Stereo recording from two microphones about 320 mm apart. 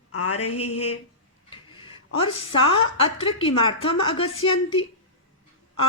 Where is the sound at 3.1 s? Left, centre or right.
Centre.